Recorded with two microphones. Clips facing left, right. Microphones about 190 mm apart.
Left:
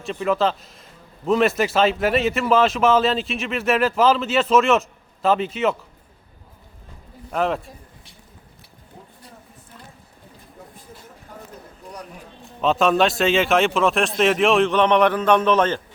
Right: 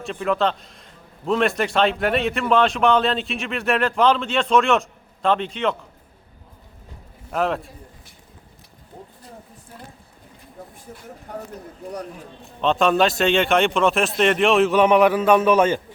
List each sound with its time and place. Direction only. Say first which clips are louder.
0.0 s a man's voice: left 1 dB; centre (ahead or behind)
7.3 s a man's voice: even; centre (ahead or behind)
11.3 s a sound: right 8 dB; 70° right (ahead or behind)
12.6 s a man's voice: even; centre (ahead or behind)